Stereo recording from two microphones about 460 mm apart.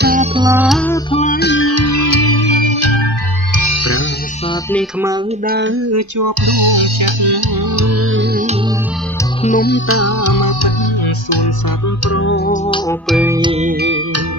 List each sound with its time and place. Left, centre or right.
0.0 s music: centre; by 3.0 s left
3.5 s music: left
5.5 s music: right
9.4 s music: centre; by 10.7 s left
12.1 s music: left
13.1 s music: centre